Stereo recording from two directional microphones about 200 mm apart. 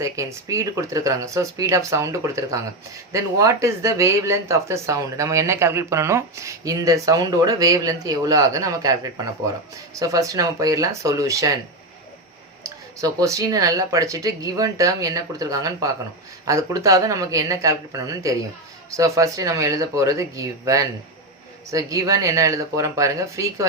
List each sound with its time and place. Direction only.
0.0 s speech: 15° right (ahead or behind)
12.6 s speech: 15° right (ahead or behind)